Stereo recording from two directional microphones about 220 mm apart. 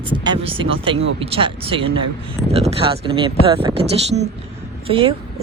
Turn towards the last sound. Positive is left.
turn(degrees=-25)  # may be behind; listen again after turning